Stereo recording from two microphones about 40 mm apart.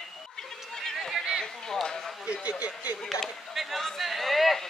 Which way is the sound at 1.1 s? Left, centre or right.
Centre.